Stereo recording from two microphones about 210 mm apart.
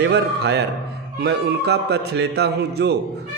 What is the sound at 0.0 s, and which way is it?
A man's voice, 55° right (ahead or behind).